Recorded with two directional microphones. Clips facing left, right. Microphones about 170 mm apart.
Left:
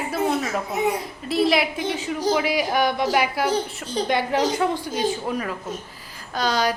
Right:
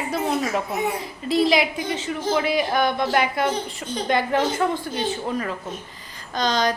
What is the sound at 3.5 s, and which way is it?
Speech, 35° left (ahead or behind).